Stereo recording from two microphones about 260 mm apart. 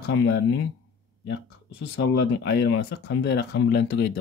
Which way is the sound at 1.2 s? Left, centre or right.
Left.